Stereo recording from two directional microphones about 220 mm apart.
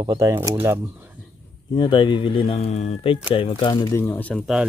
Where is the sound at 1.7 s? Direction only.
20° left (ahead or behind).